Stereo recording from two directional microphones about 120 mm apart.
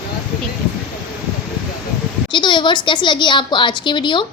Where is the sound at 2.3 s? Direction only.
40° left (ahead or behind).